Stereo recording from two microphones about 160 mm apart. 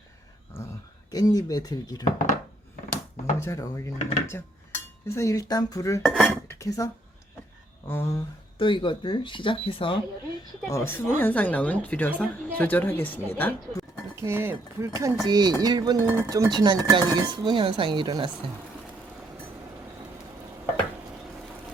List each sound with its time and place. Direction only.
1.1 s speech: 25° left (ahead or behind)
3.4 s a woman's voice: 20° left (ahead or behind)
6.0 s dishes: 5° left (ahead or behind)
6.5 s a sound: 20° left (ahead or behind)
7.9 s a woman's voice: 15° left (ahead or behind)
8.5 s speech: 30° left (ahead or behind)
10.7 s a woman's voice: 15° left (ahead or behind)
14.2 s speech: 15° right (ahead or behind); by 18.3 s 30° right (ahead or behind)